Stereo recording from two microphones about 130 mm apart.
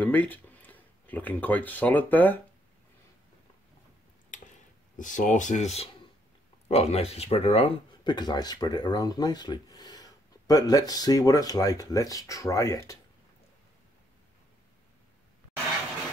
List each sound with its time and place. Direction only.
0.0 s speech: 15° left (ahead or behind)
4.9 s speech: 80° left; by 13.0 s 25° left (ahead or behind)